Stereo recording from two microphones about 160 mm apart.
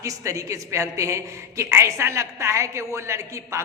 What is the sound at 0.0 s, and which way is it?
A man's voice, 20° right (ahead or behind).